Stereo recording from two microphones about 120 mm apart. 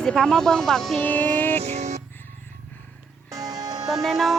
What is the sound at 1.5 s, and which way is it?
Music, 65° right (ahead or behind).